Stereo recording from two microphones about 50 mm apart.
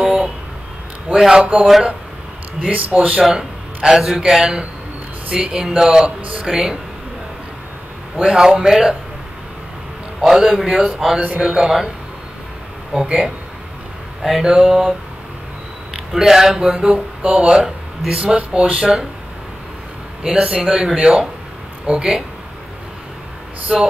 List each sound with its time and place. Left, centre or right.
0.0 s a sound: centre
1.4 s speech: right
3.3 s a man's voice: centre
8.2 s speech: centre
10.2 s speech: centre
10.7 s speech: right
11.4 s speech: centre
12.9 s speech: centre
14.4 s speech: centre
16.1 s speech: centre
20.2 s speech: centre
23.7 s a sound: centre